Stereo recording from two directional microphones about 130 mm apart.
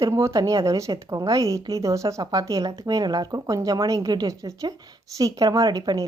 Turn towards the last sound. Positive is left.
turn(degrees=-30)  # may be behind; listen again after turning